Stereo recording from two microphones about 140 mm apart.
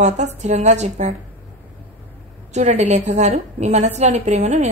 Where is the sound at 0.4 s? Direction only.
55° right (ahead or behind).